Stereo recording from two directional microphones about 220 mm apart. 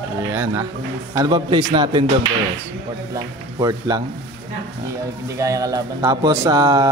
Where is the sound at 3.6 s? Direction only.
15° right (ahead or behind).